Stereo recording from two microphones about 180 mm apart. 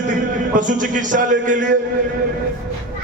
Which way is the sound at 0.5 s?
45° right (ahead or behind).